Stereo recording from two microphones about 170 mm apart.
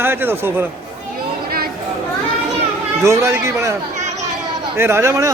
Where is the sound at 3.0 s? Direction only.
15° right (ahead or behind).